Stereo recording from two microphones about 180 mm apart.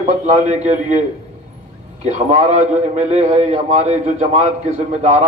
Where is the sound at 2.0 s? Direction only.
40° right (ahead or behind).